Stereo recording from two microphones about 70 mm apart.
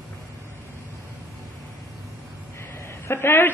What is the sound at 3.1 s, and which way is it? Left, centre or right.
Speech, left.